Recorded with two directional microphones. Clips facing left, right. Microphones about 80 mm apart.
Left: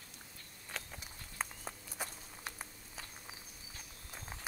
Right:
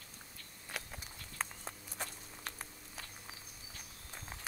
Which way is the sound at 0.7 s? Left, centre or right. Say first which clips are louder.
Right 1 dB; centre.